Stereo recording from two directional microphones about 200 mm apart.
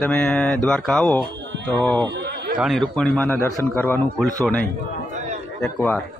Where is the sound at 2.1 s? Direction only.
55° right (ahead or behind).